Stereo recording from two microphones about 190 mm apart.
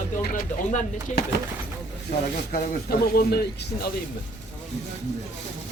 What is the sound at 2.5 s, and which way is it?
Speech, 55° left (ahead or behind).